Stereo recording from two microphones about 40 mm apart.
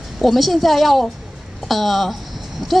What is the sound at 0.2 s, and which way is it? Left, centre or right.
A woman's voice, centre.